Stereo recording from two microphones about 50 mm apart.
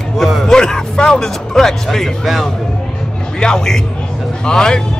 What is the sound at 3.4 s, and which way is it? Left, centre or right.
A man's voice, centre.